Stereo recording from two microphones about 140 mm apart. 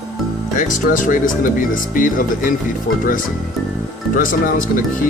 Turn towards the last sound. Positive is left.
turn(degrees=70)  # may be behind; listen again after turning